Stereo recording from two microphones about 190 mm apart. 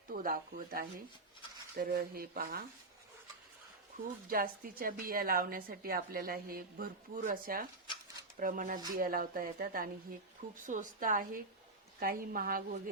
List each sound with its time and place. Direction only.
0.1 s a woman's voice: 50° right (ahead or behind)
4.3 s a woman's voice: 50° right (ahead or behind)